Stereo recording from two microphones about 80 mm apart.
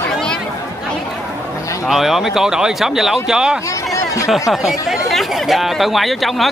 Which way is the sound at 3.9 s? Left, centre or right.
Left.